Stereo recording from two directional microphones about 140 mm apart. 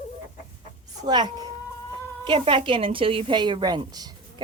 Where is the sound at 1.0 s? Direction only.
30° right (ahead or behind).